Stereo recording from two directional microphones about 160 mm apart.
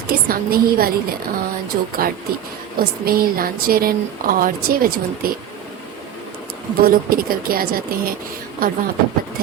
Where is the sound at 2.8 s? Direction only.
70° right (ahead or behind).